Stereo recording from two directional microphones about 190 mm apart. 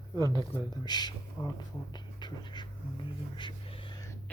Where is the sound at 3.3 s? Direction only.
25° left (ahead or behind).